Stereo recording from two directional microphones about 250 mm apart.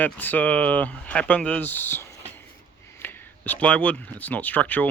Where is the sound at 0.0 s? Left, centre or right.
Centre.